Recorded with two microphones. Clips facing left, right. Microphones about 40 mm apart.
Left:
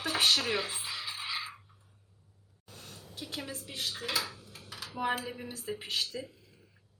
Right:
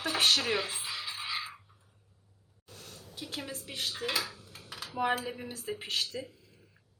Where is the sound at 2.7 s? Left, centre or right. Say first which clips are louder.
Even; left.